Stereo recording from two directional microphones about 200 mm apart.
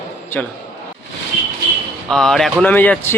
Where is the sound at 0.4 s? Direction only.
5° left (ahead or behind).